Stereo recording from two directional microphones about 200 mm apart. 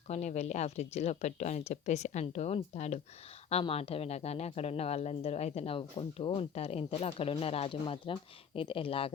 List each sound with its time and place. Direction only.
0.1 s speech: 35° left (ahead or behind)